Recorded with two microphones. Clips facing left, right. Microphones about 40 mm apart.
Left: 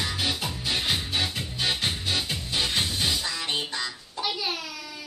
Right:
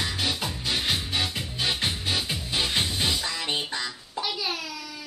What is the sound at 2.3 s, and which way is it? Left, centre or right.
Music, centre.